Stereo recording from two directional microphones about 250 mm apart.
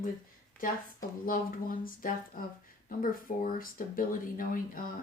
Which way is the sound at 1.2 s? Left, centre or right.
Left.